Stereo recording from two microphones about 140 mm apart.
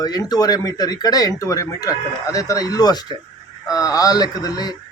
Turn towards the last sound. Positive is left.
turn(degrees=30)  # may be behind; listen again after turning